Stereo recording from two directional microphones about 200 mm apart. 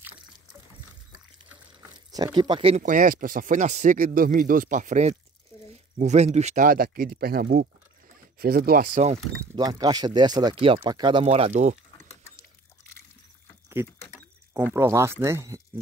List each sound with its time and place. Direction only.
2.0 s speech: 20° right (ahead or behind); by 9.2 s 35° right (ahead or behind)
9.6 s speech: 20° right (ahead or behind); by 11.8 s 35° right (ahead or behind)
13.9 s a sound: 15° left (ahead or behind)
14.5 s speech: 10° right (ahead or behind)